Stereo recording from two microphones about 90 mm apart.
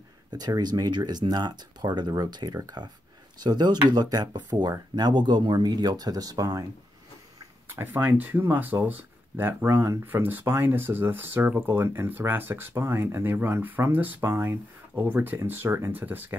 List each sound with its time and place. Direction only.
0.3 s speech: 50° right (ahead or behind)
7.7 s speech: 25° right (ahead or behind)